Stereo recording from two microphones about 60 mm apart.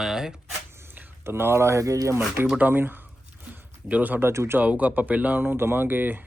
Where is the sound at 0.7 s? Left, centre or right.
Right.